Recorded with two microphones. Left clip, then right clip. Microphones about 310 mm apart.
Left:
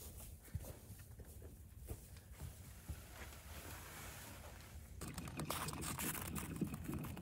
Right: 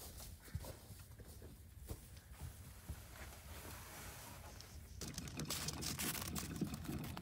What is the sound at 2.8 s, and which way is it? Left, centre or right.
Boat, centre.